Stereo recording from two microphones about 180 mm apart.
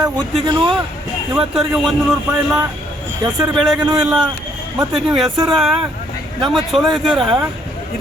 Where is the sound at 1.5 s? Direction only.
Centre (ahead or behind).